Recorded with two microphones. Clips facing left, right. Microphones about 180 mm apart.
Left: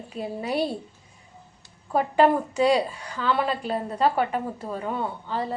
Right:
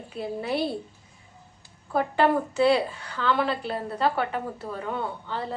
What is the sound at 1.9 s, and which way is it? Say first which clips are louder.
A woman's voice: left 2 dB; 15° left (ahead or behind).